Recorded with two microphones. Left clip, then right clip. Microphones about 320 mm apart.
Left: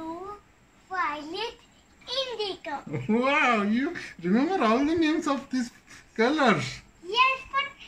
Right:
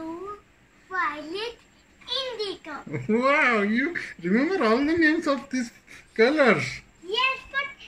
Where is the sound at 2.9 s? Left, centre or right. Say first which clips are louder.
Right 3 dB; centre.